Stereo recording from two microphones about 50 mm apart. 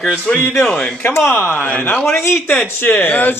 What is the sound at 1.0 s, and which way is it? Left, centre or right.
Speech, left.